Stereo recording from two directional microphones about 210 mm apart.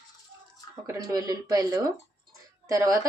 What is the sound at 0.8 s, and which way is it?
Speech, 15° right (ahead or behind).